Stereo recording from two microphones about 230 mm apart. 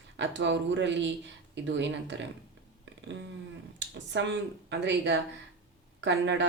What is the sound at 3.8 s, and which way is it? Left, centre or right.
Speech, right.